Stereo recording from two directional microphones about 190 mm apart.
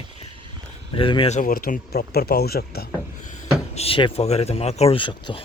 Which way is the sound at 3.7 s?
30° left (ahead or behind).